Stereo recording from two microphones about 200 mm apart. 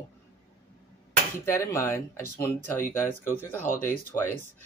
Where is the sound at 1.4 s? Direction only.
10° left (ahead or behind).